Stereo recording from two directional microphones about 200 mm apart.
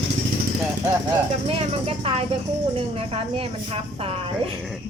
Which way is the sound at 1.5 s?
30° right (ahead or behind).